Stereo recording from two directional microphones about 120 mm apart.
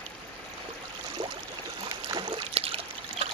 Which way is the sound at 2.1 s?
40° right (ahead or behind).